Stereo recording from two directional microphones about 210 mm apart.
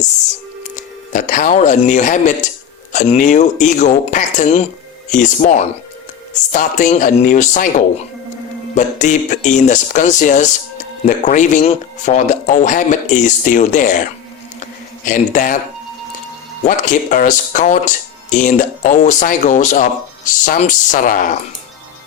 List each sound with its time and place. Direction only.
1.1 s speech: 40° left (ahead or behind)
14.6 s a sound: 40° left (ahead or behind)
16.6 s speech: 40° left (ahead or behind)